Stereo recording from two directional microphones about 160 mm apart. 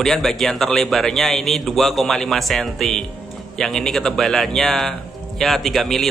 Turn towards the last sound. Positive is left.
turn(degrees=0)  # may be behind; listen again after turning